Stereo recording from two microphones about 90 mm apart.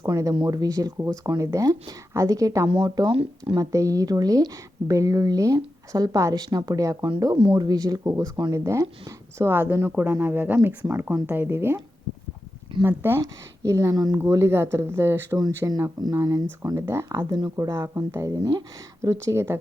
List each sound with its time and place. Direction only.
0.0 s a woman's voice: 40° right (ahead or behind)
2.6 s speech: 65° right (ahead or behind)
3.6 s a woman's voice: 35° right (ahead or behind)
9.5 s speech: 25° right (ahead or behind)
12.8 s speech: 25° right (ahead or behind)
13.2 s a woman's voice: 40° right (ahead or behind)
14.2 s speech: 30° right (ahead or behind)
15.4 s a woman's voice: 45° right (ahead or behind)